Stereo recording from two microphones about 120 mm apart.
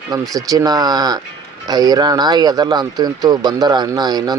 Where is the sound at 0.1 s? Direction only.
30° right (ahead or behind).